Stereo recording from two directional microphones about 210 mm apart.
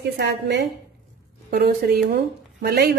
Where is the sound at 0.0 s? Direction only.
55° right (ahead or behind).